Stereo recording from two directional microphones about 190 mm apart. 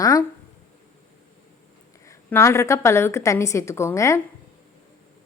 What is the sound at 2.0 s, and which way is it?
A woman's voice, 15° left (ahead or behind).